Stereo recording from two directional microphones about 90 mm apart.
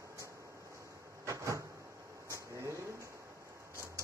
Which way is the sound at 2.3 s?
35° right (ahead or behind).